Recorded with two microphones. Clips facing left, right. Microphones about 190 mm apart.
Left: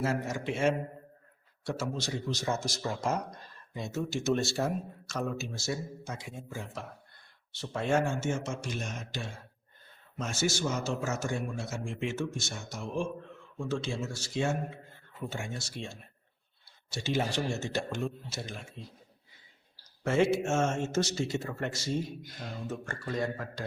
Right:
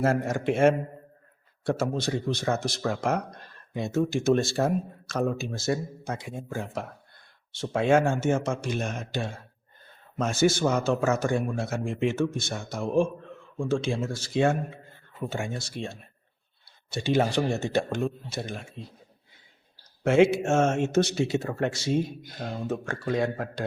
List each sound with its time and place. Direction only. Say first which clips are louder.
0.0 s a man's voice: right 7 dB; 55° right (ahead or behind)
7.6 s speech: right 7 dB; 90° right
8.1 s a man's voice: right 7 dB; 55° right (ahead or behind)
20.1 s speech: right 6 dB; 70° right (ahead or behind)